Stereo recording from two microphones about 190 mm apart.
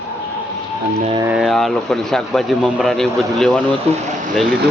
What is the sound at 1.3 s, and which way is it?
Speech, centre (ahead or behind).